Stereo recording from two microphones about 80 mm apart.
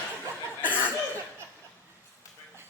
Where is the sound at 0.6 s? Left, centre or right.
Left.